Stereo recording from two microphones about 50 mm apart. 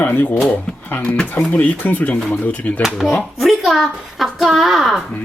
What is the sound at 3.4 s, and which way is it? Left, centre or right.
A child's voice, centre.